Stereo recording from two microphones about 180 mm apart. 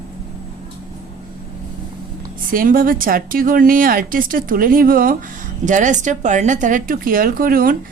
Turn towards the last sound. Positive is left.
turn(degrees=-55)  # may be behind; listen again after turning